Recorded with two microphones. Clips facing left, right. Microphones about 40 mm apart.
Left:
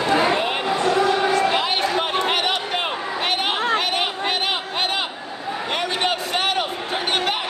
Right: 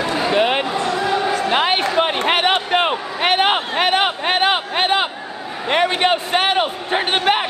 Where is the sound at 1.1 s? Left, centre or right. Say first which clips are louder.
Even; right.